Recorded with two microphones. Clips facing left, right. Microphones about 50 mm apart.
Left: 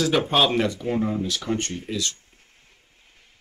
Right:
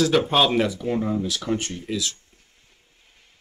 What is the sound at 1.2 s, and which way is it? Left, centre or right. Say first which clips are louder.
Speech: even; centre.